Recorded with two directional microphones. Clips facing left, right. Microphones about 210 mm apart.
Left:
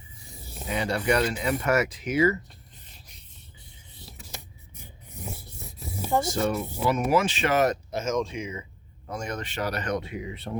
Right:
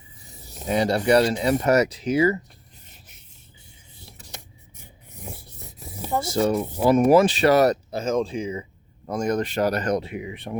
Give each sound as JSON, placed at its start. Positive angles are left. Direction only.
{"t": 0.7, "sound": "speech", "side_deg": -35}
{"t": 6.0, "sound": "rub", "side_deg": 0}
{"t": 6.7, "sound": "speech", "side_deg": -45}
{"t": 7.1, "sound": "speech", "side_deg": -35}